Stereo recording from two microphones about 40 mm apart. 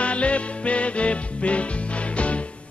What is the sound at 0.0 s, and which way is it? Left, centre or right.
Music, left.